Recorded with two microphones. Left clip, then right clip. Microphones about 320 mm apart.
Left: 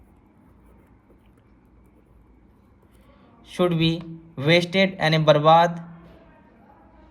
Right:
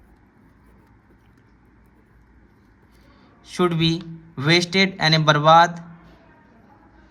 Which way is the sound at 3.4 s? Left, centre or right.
Centre.